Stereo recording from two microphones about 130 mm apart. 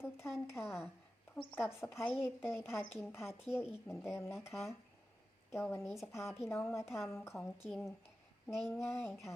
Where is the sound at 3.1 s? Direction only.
20° left (ahead or behind).